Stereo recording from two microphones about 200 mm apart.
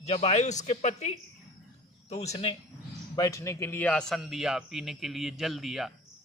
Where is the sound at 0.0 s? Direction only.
30° left (ahead or behind).